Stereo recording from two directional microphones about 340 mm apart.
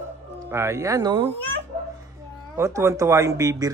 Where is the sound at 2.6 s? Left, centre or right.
Centre.